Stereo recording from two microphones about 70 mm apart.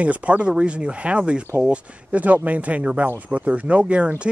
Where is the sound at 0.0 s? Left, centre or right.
Centre.